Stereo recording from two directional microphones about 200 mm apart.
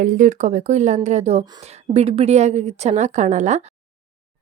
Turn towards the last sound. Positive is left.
turn(degrees=-35)  # may be behind; listen again after turning